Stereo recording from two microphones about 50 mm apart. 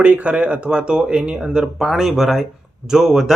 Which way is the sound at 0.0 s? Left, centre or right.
Right.